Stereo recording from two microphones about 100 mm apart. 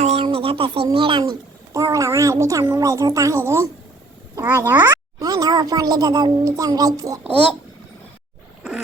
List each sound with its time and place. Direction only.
0.1 s a sound: 75° right (ahead or behind)
0.9 s speech: 60° right (ahead or behind)
1.7 s a child's voice: 35° right (ahead or behind)
5.2 s a child's voice: 40° right (ahead or behind)